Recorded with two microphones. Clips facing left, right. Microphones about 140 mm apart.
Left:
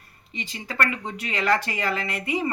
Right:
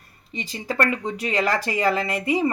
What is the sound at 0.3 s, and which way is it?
Speech, 40° right (ahead or behind).